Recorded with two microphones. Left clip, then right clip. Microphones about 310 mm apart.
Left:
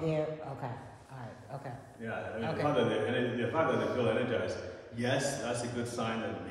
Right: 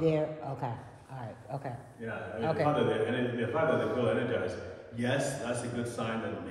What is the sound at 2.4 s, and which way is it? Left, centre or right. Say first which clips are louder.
Speech: right 6 dB; right.